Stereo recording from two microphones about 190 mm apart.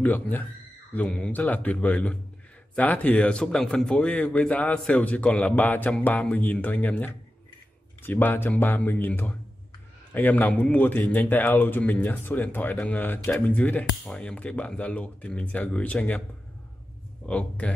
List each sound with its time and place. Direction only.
0.0 s speech: 10° left (ahead or behind)
17.3 s speech: 5° left (ahead or behind)